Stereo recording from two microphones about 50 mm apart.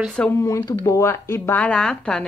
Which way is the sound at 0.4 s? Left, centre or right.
Left.